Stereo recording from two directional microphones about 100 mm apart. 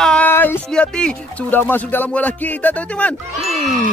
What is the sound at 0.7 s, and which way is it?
Speech, 10° left (ahead or behind).